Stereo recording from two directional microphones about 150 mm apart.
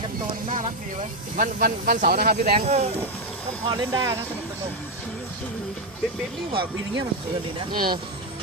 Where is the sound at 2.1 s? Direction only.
90° right.